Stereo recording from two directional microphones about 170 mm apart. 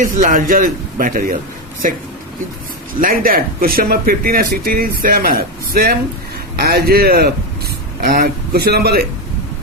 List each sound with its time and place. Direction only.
0.0 s a man's voice: 55° right (ahead or behind)
3.0 s speech: 55° right (ahead or behind)